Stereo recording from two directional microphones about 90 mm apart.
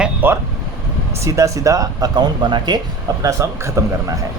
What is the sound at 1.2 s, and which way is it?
Speech, 40° right (ahead or behind).